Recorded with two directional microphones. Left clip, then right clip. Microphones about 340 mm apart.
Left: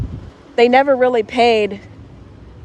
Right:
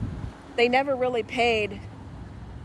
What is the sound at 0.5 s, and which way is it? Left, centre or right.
Speech, centre.